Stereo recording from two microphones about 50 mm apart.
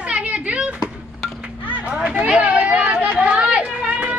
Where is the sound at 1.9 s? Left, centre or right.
Right.